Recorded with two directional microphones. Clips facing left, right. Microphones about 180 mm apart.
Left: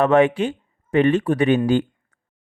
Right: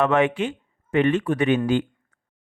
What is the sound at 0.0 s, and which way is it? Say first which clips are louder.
A man's voice: left 4 dB; 35° left (ahead or behind).